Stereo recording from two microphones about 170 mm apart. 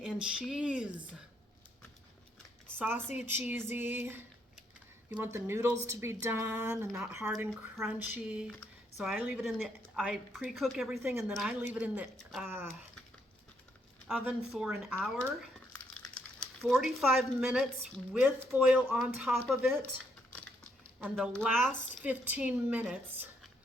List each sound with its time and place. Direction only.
0.0 s a sound: 5° right (ahead or behind)
2.6 s a sound: 10° right (ahead or behind)
3.2 s speech: 10° right (ahead or behind)
6.8 s a woman's voice: 5° right (ahead or behind)
14.1 s a woman's voice: 5° right (ahead or behind)
21.0 s speech: 5° right (ahead or behind)